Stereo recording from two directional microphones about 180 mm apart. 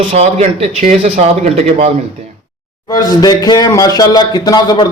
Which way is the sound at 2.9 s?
20° left (ahead or behind).